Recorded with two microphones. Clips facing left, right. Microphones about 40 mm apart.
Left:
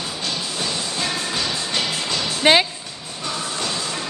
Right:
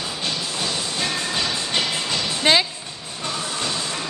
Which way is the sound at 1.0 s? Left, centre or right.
Centre.